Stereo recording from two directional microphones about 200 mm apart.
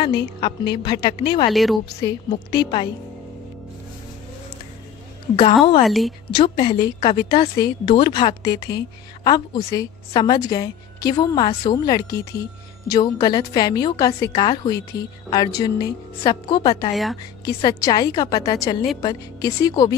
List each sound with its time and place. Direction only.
0.0 s a woman's voice: 25° left (ahead or behind)
1.5 s a woman's voice: centre (ahead or behind)
2.0 s a woman's voice: 20° left (ahead or behind)
5.3 s a woman's voice: 25° left (ahead or behind)
5.9 s a woman's voice: centre (ahead or behind)
6.3 s a woman's voice: 25° left (ahead or behind)
16.9 s a woman's voice: centre (ahead or behind)
17.6 s a woman's voice: 20° left (ahead or behind)